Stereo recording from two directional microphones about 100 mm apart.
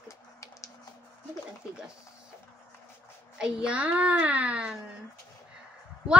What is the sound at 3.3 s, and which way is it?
A woman's voice, 10° right (ahead or behind).